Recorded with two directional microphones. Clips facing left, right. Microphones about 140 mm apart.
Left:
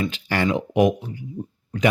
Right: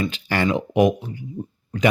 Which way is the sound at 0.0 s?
35° right (ahead or behind).